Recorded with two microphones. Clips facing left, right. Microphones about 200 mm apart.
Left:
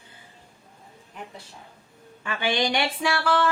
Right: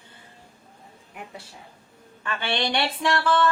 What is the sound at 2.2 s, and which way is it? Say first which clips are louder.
A woman's voice: left 2 dB; 10° left (ahead or behind).